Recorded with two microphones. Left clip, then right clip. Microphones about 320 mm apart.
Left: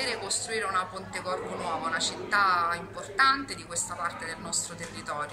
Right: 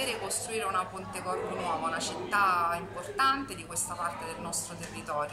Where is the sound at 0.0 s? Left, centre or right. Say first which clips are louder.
Left 2 dB; centre.